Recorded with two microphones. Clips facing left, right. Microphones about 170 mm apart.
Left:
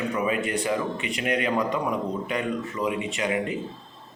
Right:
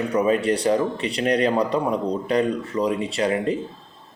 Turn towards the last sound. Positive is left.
turn(degrees=-35)  # may be behind; listen again after turning